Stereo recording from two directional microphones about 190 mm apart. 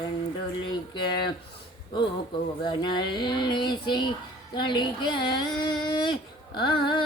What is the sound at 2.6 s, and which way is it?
Speech, 25° left (ahead or behind).